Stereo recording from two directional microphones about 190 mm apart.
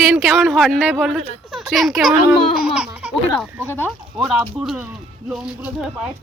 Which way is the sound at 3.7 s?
10° left (ahead or behind).